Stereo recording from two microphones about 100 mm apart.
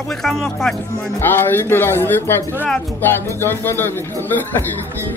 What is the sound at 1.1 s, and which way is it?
Speech, 20° left (ahead or behind).